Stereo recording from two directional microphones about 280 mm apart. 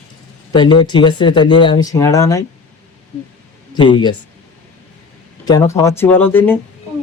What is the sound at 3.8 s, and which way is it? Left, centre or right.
Speech, centre.